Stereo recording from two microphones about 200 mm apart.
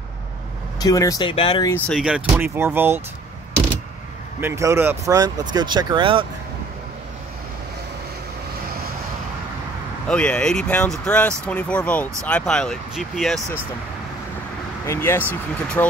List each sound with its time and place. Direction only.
0.7 s speech: 15° left (ahead or behind)
1.7 s speech: centre (ahead or behind)
4.4 s speech: 15° right (ahead or behind)
10.0 s speech: 5° left (ahead or behind)
14.9 s speech: 10° left (ahead or behind)